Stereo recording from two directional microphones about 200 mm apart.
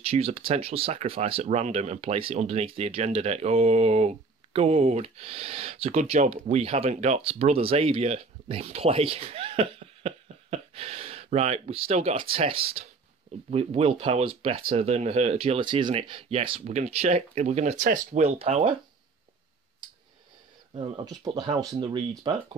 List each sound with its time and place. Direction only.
0.0 s speech: 30° right (ahead or behind)
20.7 s speech: 25° right (ahead or behind)